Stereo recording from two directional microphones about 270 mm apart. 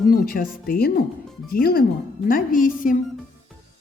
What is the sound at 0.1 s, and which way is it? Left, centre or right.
A woman's voice, left.